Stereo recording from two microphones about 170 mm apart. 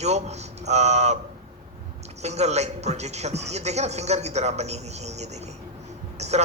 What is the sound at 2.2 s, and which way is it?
Speech, 40° right (ahead or behind).